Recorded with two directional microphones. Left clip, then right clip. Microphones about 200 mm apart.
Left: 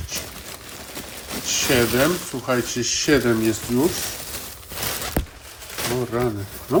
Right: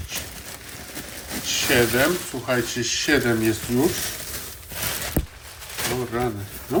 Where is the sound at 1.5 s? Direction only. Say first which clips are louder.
Even; 20° left (ahead or behind).